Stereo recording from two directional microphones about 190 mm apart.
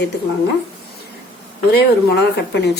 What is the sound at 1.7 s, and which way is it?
Speech, 60° left (ahead or behind).